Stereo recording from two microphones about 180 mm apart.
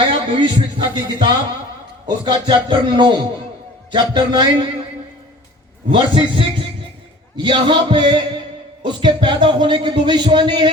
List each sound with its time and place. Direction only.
0.1 s a man's voice: 25° right (ahead or behind)
5.9 s a man's voice: 30° right (ahead or behind)